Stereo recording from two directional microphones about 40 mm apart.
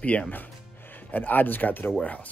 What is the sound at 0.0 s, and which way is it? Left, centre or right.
Speech, left.